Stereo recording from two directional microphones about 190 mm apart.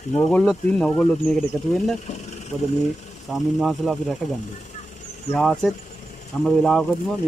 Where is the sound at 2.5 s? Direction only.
10° left (ahead or behind).